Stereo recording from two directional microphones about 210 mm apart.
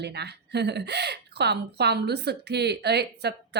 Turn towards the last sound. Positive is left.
turn(degrees=-50)  # may be behind; listen again after turning